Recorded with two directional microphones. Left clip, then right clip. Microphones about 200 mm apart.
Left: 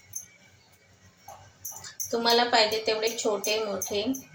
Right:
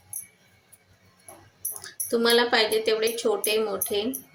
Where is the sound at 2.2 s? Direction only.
60° right (ahead or behind).